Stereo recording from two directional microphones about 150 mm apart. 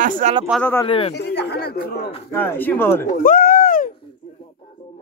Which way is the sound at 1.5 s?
90° left.